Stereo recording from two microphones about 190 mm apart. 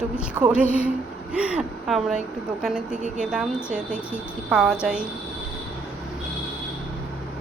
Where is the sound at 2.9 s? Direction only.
40° right (ahead or behind).